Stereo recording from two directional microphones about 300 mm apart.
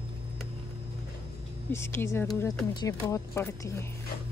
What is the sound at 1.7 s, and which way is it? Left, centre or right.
Speech, centre.